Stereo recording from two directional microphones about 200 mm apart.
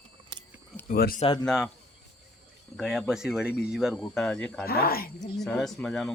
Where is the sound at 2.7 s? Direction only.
Centre (ahead or behind).